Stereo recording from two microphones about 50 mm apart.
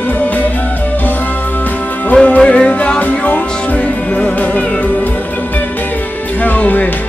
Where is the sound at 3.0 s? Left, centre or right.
Left.